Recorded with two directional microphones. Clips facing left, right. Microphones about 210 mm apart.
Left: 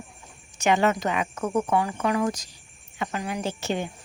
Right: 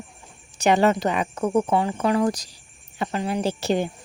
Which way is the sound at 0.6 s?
35° right (ahead or behind).